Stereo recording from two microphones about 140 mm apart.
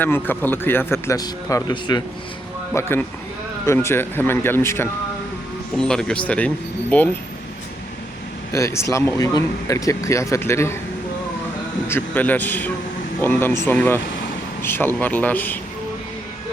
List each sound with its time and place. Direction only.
0.0 s a man's voice: 15° left (ahead or behind); by 2.0 s 30° left (ahead or behind)
2.8 s speech: 20° left (ahead or behind)
5.7 s speech: 5° left (ahead or behind)
8.5 s speech: 20° left (ahead or behind)
11.9 s speech: 15° left (ahead or behind)